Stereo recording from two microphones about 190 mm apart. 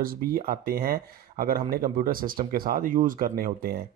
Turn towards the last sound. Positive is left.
turn(degrees=-45)  # may be behind; listen again after turning